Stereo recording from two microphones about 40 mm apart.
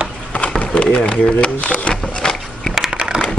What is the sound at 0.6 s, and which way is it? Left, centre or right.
Speech, left.